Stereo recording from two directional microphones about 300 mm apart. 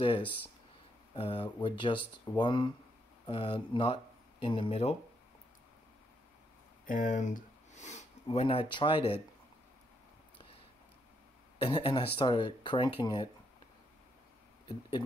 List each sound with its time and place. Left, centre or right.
1.1 s speech: centre
6.9 s speech: left
11.6 s speech: centre
14.7 s speech: centre